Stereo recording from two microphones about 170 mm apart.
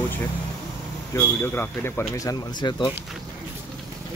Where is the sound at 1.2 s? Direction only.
10° left (ahead or behind).